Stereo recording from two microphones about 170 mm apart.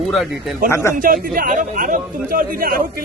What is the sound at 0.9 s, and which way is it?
Speech, 55° right (ahead or behind).